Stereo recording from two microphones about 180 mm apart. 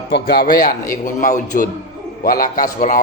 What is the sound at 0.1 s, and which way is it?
A man's voice, 65° left (ahead or behind).